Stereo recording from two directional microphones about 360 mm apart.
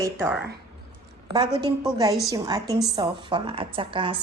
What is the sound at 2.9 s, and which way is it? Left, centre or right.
A woman's voice, centre.